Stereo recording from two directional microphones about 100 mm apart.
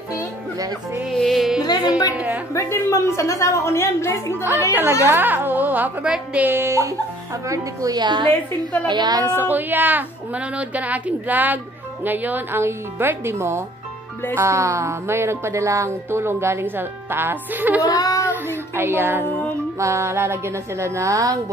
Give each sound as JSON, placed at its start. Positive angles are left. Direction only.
{"t": 1.1, "sound": "music", "side_deg": 0}
{"t": 1.6, "sound": "a sound", "side_deg": 40}
{"t": 2.1, "sound": "speech", "side_deg": -15}
{"t": 2.5, "sound": "a woman's voice", "side_deg": 30}
{"t": 5.0, "sound": "a woman's voice", "side_deg": -20}
{"t": 6.5, "sound": "a woman's voice", "side_deg": -25}
{"t": 9.2, "sound": "a woman's voice", "side_deg": -20}
{"t": 17.8, "sound": "child singing", "side_deg": 35}
{"t": 18.3, "sound": "music", "side_deg": -20}
{"t": 19.8, "sound": "a woman's voice", "side_deg": -30}